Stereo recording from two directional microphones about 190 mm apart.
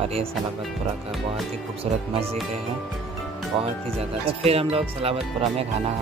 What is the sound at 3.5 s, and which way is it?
Speech, 30° right (ahead or behind).